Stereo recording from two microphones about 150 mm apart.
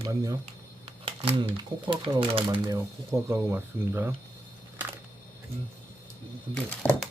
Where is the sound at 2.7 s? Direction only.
20° right (ahead or behind).